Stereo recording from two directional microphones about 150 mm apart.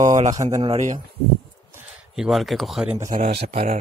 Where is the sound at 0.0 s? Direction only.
50° right (ahead or behind).